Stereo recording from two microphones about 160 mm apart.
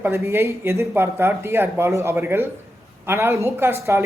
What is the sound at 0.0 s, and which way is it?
A man's voice, 15° right (ahead or behind).